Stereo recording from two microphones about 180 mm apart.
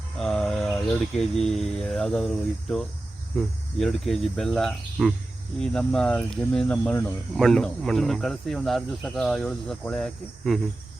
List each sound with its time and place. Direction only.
0.2 s speech: centre (ahead or behind)